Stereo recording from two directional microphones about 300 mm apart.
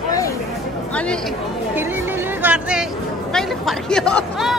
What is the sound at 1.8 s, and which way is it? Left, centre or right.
Speech, centre.